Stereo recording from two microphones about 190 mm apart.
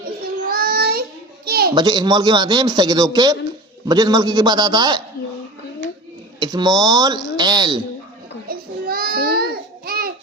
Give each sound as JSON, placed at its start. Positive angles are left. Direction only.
{"t": 0.4, "sound": "child singing", "side_deg": -50}
{"t": 1.5, "sound": "a sound", "side_deg": -55}
{"t": 1.7, "sound": "a man's voice", "side_deg": -20}
{"t": 6.4, "sound": "a man's voice", "side_deg": -20}
{"t": 8.4, "sound": "babbling", "side_deg": -50}